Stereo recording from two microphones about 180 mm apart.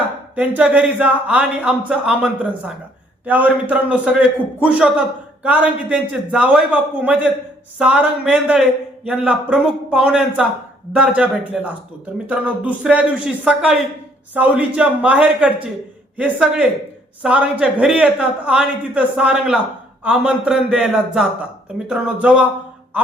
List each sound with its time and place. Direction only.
0.3 s a man's voice: 10° right (ahead or behind)